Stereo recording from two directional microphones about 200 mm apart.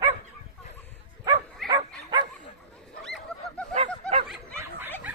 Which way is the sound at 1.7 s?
20° right (ahead or behind).